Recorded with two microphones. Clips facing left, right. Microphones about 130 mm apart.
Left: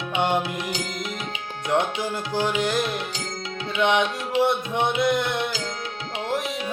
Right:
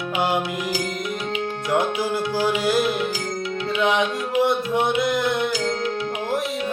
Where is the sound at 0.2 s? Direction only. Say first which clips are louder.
Even; 5° right (ahead or behind).